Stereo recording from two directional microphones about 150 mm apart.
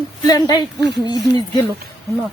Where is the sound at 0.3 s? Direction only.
25° left (ahead or behind).